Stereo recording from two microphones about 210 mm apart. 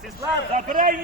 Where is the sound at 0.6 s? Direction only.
40° right (ahead or behind).